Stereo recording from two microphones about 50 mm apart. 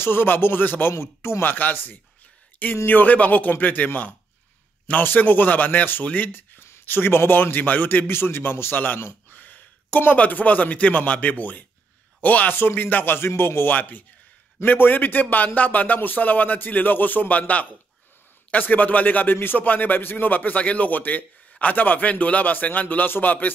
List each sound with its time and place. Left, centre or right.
0.0 s speech: left
0.9 s speech: left
1.4 s speech: left
6.9 s speech: left
13.7 s speech: left